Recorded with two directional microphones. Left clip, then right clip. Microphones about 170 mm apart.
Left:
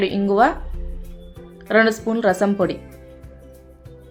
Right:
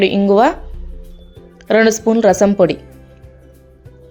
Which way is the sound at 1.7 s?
35° right (ahead or behind).